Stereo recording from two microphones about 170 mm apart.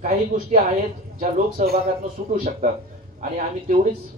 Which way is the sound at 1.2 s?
60° right (ahead or behind).